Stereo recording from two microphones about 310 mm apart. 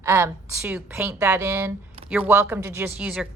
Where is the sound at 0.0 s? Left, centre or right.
Centre.